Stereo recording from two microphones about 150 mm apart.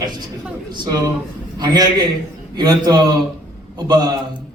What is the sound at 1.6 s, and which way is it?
A man's voice, 25° right (ahead or behind).